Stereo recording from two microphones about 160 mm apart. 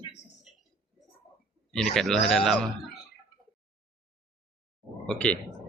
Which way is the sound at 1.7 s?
5° left (ahead or behind).